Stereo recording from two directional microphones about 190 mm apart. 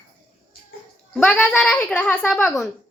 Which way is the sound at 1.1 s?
5° left (ahead or behind).